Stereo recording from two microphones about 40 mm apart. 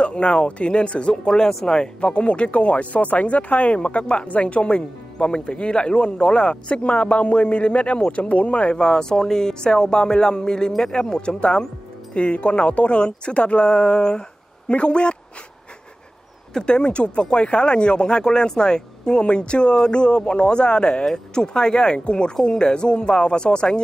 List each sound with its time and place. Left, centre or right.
0.0 s speech: left
1.1 s speech: centre
8.8 s speech: centre
16.6 s speech: left